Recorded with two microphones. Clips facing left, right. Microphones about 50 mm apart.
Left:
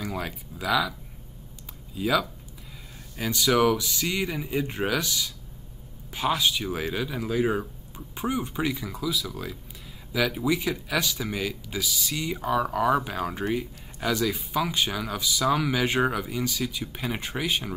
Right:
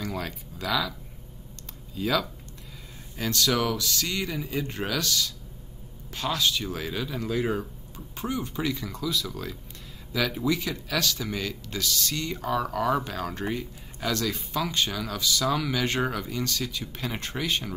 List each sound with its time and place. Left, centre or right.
0.0 s speech: centre
2.0 s speech: centre